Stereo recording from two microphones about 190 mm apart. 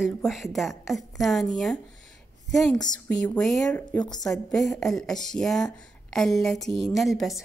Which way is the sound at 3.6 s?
15° left (ahead or behind).